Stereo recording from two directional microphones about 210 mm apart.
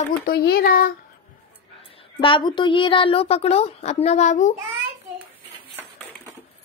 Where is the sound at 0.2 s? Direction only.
45° left (ahead or behind).